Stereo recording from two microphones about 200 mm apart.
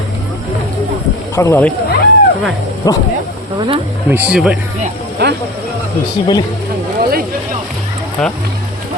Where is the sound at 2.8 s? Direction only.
15° left (ahead or behind).